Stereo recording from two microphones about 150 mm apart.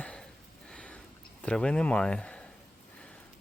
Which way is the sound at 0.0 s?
5° left (ahead or behind).